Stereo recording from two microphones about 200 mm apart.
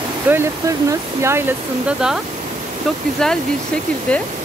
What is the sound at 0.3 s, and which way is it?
Speech, 15° right (ahead or behind).